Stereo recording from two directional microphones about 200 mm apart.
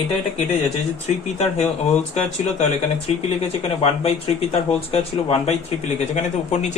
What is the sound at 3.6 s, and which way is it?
Speech, 30° left (ahead or behind).